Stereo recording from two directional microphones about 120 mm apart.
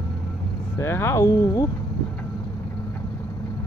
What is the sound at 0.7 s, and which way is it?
Speech, 20° left (ahead or behind).